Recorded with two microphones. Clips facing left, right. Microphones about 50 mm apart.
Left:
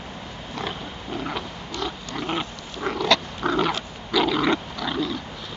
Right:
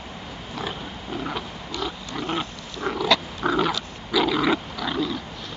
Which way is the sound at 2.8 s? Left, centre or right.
Centre.